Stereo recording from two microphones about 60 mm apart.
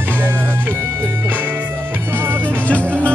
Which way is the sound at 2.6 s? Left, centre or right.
Left.